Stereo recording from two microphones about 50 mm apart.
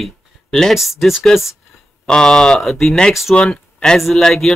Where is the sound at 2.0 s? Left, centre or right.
Centre.